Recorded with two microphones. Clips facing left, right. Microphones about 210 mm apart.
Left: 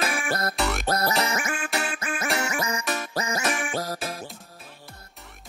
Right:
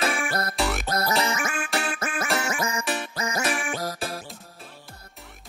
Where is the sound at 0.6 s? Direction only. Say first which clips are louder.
Even; centre (ahead or behind).